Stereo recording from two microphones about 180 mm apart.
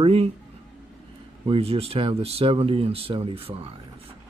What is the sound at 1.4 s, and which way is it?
Speech, 30° right (ahead or behind).